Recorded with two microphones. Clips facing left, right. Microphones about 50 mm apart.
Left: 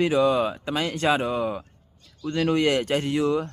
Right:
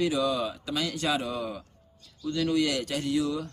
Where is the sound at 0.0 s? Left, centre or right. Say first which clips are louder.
Left 6 dB; left.